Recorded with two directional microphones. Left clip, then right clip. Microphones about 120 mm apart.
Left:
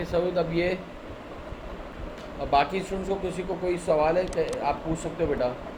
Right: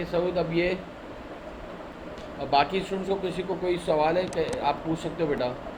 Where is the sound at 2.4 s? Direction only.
20° right (ahead or behind).